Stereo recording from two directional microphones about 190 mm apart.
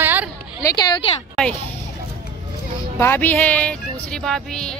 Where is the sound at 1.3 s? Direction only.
5° left (ahead or behind).